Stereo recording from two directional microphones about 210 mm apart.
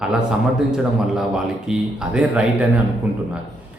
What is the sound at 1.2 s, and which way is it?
A man's voice, 5° right (ahead or behind).